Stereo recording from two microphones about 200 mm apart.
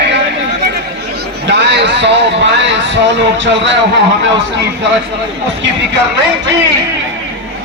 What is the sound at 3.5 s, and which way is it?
Speech, 65° right (ahead or behind).